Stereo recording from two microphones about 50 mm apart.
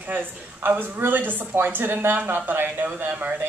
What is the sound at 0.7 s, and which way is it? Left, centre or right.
A woman's voice, right.